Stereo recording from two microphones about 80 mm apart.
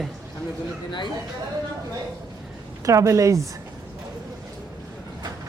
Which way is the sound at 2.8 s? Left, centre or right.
Right.